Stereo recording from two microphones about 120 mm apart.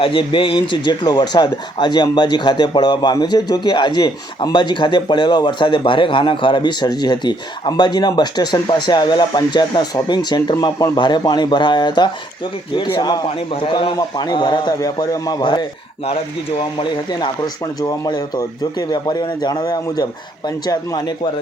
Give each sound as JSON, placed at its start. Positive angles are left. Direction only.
{"t": 0.0, "sound": "speech", "side_deg": 45}
{"t": 13.2, "sound": "speech", "side_deg": 50}